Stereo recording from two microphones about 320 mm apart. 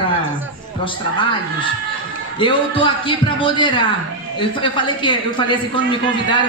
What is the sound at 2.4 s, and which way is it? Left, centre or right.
A man's voice, centre.